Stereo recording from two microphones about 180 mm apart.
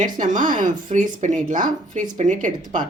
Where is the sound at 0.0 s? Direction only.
45° right (ahead or behind).